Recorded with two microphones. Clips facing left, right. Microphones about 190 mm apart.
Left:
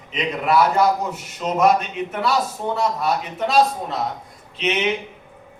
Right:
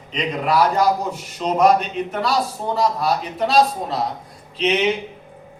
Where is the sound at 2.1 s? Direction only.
35° right (ahead or behind).